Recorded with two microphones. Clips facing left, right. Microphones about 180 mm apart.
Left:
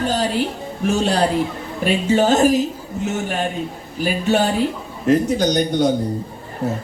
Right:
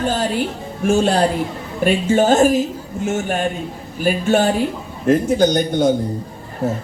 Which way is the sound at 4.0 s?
50° right (ahead or behind).